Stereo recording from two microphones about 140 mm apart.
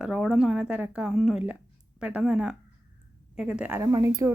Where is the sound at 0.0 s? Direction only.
5° right (ahead or behind).